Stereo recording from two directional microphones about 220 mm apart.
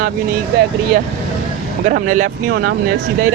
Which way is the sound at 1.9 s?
35° right (ahead or behind).